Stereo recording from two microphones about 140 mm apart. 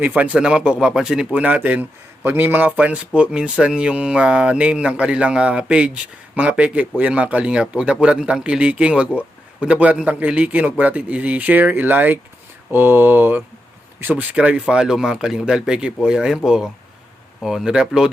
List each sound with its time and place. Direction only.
0.0 s speech: 10° right (ahead or behind)